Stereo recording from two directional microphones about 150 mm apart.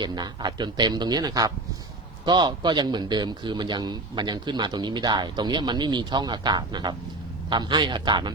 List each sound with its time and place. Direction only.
0.0 s a man's voice: 30° right (ahead or behind)